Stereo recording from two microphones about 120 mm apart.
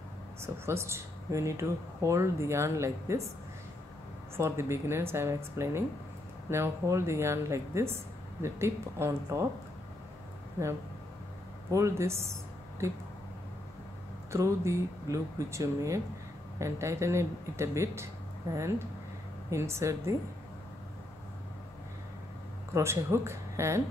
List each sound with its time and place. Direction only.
0.4 s speech: 20° right (ahead or behind)
4.4 s speech: 20° right (ahead or behind)
11.7 s speech: 25° right (ahead or behind)
14.3 s speech: 25° right (ahead or behind)
22.8 s speech: 25° right (ahead or behind)